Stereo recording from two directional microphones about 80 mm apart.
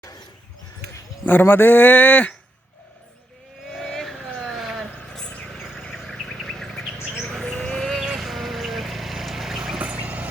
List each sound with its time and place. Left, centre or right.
1.2 s speech: left
3.7 s vehicle: centre
4.3 s a sound: centre
5.0 s a sound: centre
5.5 s bird: centre
8.0 s vehicle: centre